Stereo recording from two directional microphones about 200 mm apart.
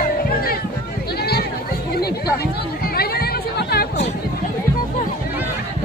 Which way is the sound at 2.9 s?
50° left (ahead or behind).